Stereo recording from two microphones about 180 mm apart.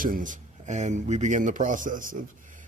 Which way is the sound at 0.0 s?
50° right (ahead or behind).